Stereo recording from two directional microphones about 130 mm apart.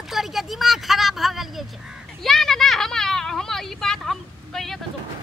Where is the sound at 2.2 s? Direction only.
5° left (ahead or behind).